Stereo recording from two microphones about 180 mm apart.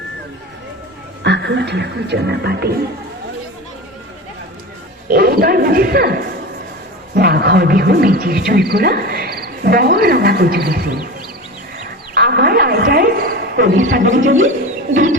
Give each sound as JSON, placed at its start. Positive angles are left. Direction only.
{"t": 1.2, "sound": "speech", "side_deg": -75}
{"t": 5.0, "sound": "speech", "side_deg": -55}
{"t": 12.1, "sound": "music", "side_deg": -60}